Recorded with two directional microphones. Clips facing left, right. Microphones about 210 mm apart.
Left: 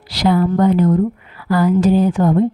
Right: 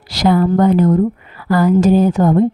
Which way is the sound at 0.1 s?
45° right (ahead or behind).